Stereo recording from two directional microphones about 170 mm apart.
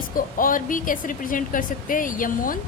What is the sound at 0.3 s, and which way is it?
A woman's voice, 55° left (ahead or behind).